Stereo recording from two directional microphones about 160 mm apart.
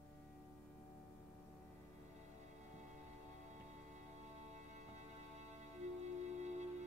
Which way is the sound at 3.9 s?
45° right (ahead or behind).